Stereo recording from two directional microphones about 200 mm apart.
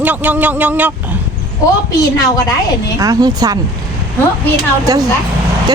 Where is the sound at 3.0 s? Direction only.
15° right (ahead or behind).